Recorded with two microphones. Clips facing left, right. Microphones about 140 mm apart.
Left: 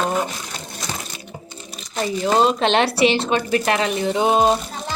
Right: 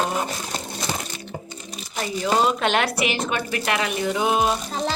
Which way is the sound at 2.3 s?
25° left (ahead or behind).